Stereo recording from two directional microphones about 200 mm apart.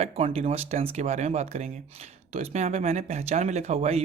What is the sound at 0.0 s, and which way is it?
Speech, 30° right (ahead or behind).